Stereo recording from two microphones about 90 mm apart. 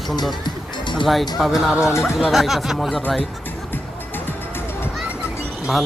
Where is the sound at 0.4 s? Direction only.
60° left (ahead or behind).